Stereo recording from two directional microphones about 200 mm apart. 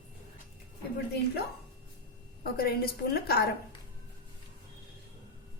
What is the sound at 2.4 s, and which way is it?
A woman's voice, 50° left (ahead or behind).